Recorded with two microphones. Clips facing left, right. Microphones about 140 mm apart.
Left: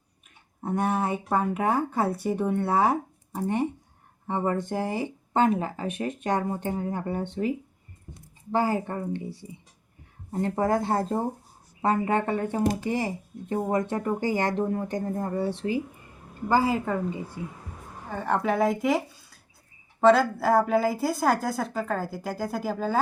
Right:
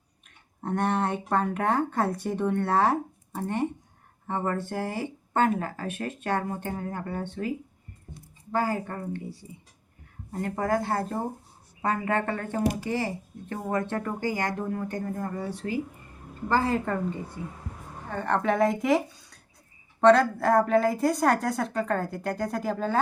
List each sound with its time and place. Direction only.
0.6 s speech: 5° left (ahead or behind)
8.5 s speech: 20° left (ahead or behind)
16.5 s speech: 5° left (ahead or behind)